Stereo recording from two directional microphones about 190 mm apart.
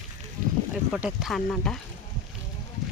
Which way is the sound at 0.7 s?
5° right (ahead or behind).